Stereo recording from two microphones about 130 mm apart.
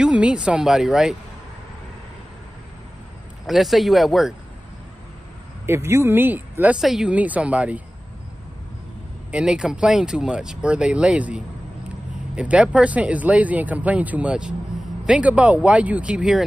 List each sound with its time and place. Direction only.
0.0 s speech: 5° right (ahead or behind)
3.4 s speech: centre (ahead or behind)
5.7 s speech: 20° right (ahead or behind)
6.8 s speech: 5° right (ahead or behind)
9.3 s speech: 5° right (ahead or behind)